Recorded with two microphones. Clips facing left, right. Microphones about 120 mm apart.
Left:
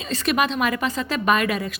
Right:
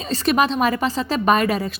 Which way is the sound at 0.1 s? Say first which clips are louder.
Right 3 dB; 35° right (ahead or behind).